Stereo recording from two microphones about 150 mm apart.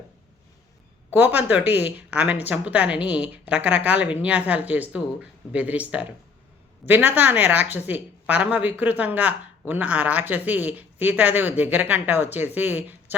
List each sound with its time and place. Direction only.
1.1 s speech: 10° right (ahead or behind)